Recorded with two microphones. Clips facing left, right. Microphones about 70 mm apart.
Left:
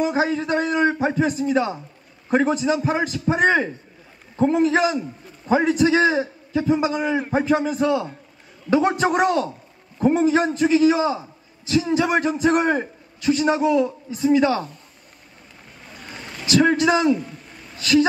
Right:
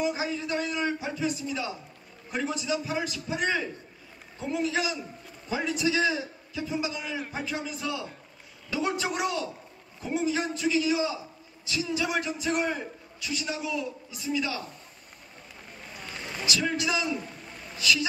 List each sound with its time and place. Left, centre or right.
0.0 s a man's voice: left
16.4 s a man's voice: left